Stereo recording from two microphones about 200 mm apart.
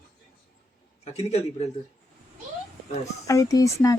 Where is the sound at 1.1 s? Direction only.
30° left (ahead or behind).